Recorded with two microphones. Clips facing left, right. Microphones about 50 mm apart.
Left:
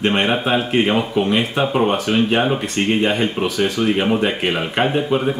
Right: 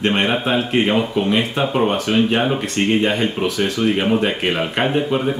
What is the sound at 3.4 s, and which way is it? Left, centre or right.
Speech, centre.